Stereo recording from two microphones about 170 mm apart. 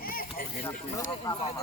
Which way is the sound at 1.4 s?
35° left (ahead or behind).